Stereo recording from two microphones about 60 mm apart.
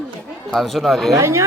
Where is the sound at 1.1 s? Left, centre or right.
Right.